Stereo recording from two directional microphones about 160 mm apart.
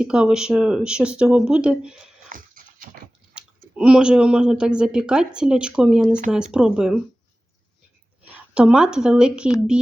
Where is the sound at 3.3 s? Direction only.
5° right (ahead or behind).